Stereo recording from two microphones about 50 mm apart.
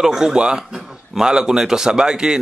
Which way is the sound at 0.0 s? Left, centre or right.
Centre.